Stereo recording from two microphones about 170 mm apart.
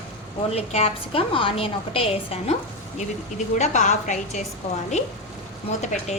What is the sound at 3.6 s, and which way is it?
A woman's voice, 45° left (ahead or behind).